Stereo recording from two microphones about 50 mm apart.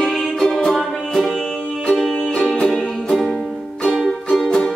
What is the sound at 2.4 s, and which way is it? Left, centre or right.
Music, centre.